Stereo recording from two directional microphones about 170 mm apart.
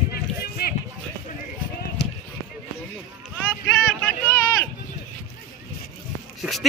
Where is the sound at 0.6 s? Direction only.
65° left (ahead or behind).